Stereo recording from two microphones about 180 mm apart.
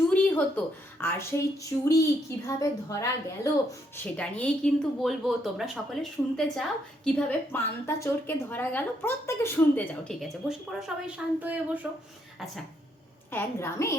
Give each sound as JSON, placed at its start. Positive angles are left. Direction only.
{"t": 0.1, "sound": "a woman's voice", "side_deg": 10}
{"t": 3.9, "sound": "speech", "side_deg": 5}
{"t": 13.3, "sound": "a woman's voice", "side_deg": 15}